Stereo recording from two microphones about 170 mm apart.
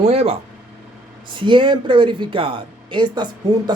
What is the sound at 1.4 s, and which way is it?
Speech, 30° right (ahead or behind).